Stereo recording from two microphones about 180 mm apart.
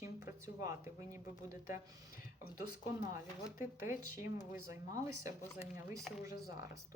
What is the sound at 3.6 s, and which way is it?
Speech, 15° right (ahead or behind).